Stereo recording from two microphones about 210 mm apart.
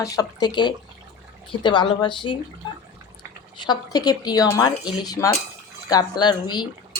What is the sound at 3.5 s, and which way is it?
Speech, 20° left (ahead or behind).